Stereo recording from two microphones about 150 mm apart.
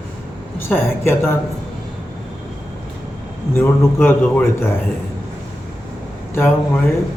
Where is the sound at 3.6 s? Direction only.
15° left (ahead or behind).